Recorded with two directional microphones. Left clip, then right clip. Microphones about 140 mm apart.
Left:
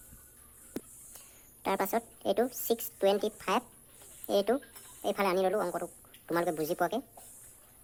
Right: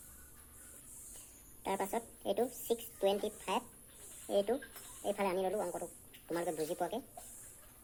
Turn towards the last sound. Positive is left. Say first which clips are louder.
# left 6 dB
turn(degrees=60)  # may be behind; listen again after turning